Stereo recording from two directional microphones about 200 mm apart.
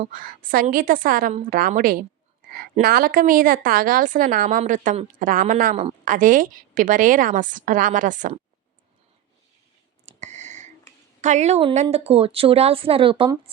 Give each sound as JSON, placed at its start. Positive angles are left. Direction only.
{"t": 0.0, "sound": "a woman's voice", "side_deg": -45}
{"t": 10.1, "sound": "a sound", "side_deg": -35}
{"t": 11.2, "sound": "a woman's voice", "side_deg": -35}